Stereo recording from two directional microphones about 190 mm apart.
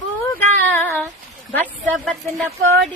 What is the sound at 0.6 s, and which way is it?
Speech, 10° left (ahead or behind).